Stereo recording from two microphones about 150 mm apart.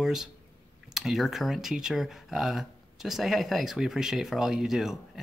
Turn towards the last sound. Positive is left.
turn(degrees=0)  # may be behind; listen again after turning